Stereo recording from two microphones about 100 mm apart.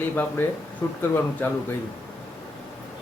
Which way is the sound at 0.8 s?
30° left (ahead or behind).